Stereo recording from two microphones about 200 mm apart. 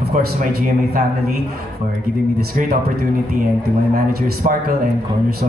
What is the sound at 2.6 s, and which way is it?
Speech, 40° right (ahead or behind).